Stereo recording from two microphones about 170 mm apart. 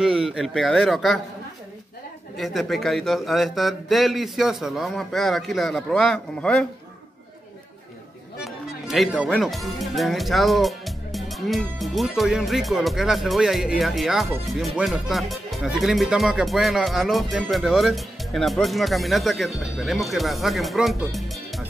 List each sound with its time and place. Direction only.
0.0 s speech: 5° right (ahead or behind)
2.3 s speech: centre (ahead or behind)
8.8 s speech: centre (ahead or behind)